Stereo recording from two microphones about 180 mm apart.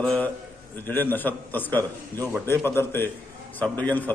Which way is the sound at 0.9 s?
10° left (ahead or behind).